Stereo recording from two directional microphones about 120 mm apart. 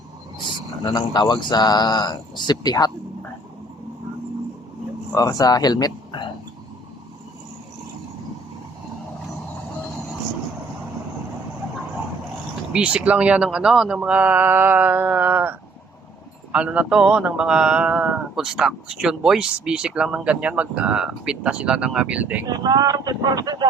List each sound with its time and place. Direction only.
0.9 s speech: 35° left (ahead or behind)
5.1 s speech: 30° left (ahead or behind)
12.7 s a man's voice: 10° right (ahead or behind)
22.4 s speech: 35° right (ahead or behind)